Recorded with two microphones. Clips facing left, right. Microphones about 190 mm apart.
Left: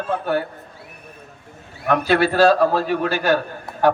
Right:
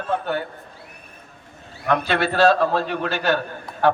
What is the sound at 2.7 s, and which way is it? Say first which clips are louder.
Speech: left 3 dB; 10° left (ahead or behind).